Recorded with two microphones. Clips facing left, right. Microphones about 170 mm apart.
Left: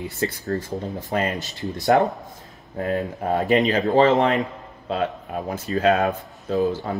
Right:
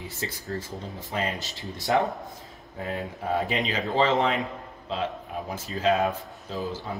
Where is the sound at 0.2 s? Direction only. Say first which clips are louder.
Left 8 dB; 45° left (ahead or behind).